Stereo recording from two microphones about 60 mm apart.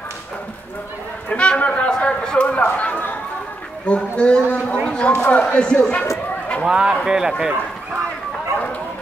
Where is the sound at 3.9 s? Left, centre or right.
Centre.